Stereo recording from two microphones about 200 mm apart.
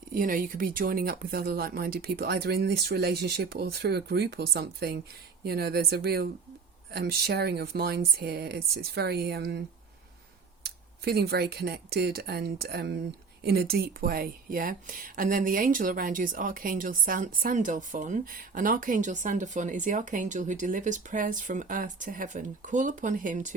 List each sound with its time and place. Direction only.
0.1 s speech: 45° right (ahead or behind)
10.6 s speech: 50° right (ahead or behind)